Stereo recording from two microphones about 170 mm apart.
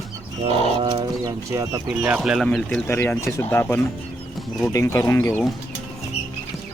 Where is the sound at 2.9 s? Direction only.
15° left (ahead or behind).